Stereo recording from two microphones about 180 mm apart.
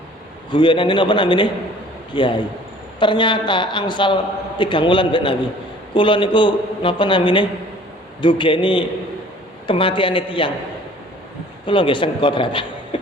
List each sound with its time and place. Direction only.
0.5 s a man's voice: 25° left (ahead or behind)
11.6 s a man's voice: 30° left (ahead or behind)